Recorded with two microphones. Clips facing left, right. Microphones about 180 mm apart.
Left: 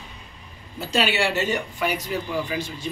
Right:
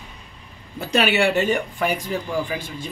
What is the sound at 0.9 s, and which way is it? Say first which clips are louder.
Speech: right 4 dB; 60° right (ahead or behind).